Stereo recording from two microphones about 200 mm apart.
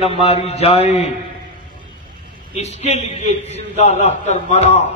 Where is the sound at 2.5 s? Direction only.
35° left (ahead or behind).